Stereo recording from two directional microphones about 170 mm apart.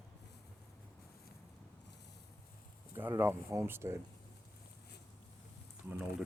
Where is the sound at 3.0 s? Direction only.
15° right (ahead or behind).